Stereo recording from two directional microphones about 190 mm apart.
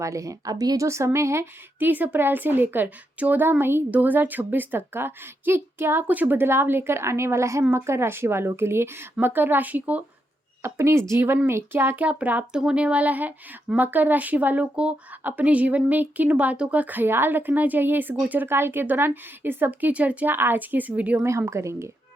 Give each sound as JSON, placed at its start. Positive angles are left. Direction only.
{"t": 0.0, "sound": "speech", "side_deg": -15}